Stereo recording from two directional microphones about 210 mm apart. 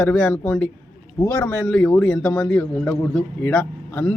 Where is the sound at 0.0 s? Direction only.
5° left (ahead or behind).